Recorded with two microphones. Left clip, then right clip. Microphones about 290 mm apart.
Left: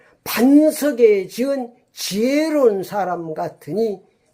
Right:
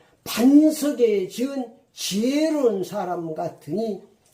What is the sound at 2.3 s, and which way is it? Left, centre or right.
Speech, left.